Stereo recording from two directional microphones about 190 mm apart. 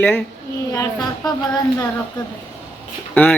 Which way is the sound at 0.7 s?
20° left (ahead or behind).